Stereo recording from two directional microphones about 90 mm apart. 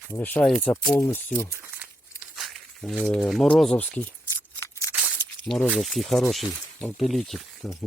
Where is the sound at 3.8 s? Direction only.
15° left (ahead or behind).